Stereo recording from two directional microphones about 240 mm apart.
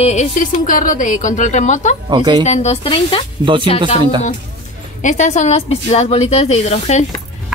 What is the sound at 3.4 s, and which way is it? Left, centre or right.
Speech, centre.